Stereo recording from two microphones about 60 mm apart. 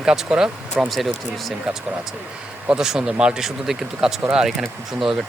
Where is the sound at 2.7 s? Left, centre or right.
Centre.